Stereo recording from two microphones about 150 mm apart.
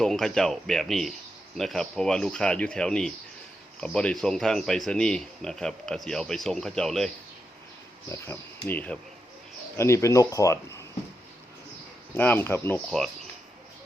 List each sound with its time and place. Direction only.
0.0 s speech: 5° left (ahead or behind)
8.1 s speech: 15° left (ahead or behind)
12.1 s speech: 15° left (ahead or behind)